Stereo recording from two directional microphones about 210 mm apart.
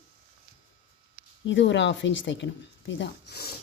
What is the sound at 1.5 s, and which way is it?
Speech, 60° left (ahead or behind).